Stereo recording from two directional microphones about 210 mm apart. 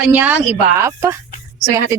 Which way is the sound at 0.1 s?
10° right (ahead or behind).